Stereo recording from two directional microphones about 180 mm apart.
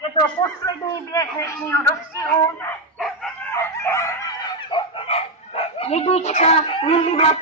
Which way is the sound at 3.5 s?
15° left (ahead or behind).